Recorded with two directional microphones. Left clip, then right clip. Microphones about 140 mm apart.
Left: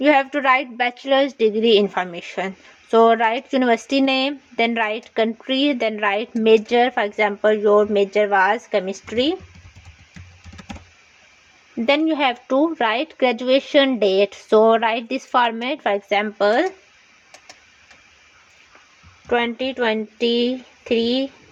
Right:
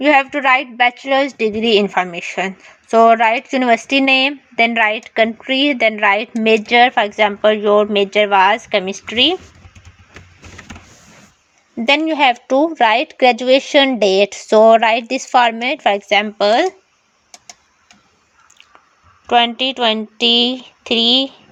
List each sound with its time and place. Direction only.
0.0 s speech: 25° right (ahead or behind)
11.9 s speech: 40° right (ahead or behind)
19.3 s speech: 45° right (ahead or behind)